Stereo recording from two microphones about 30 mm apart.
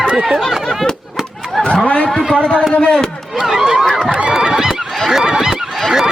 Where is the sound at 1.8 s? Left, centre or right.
Left.